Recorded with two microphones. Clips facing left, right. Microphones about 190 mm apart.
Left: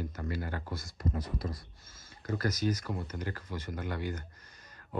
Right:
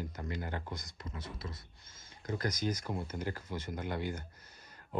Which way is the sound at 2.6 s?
10° right (ahead or behind).